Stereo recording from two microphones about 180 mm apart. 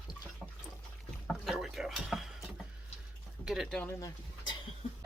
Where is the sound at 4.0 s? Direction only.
25° left (ahead or behind).